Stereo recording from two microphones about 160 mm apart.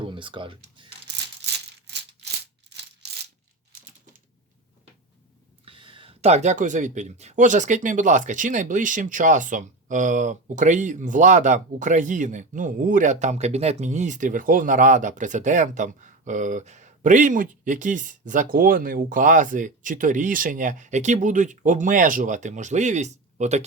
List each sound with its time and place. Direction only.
0.0 s speech: 30° right (ahead or behind)
5.6 s speech: 30° right (ahead or behind)